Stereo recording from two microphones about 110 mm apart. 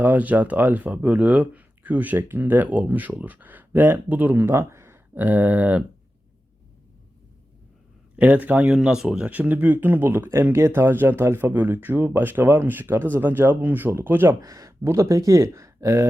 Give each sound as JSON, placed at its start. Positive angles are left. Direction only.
{"t": 0.0, "sound": "speech", "side_deg": -15}
{"t": 8.1, "sound": "speech", "side_deg": -15}
{"t": 14.4, "sound": "speech", "side_deg": -30}